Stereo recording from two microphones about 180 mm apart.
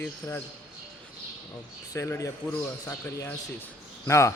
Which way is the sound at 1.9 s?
15° left (ahead or behind).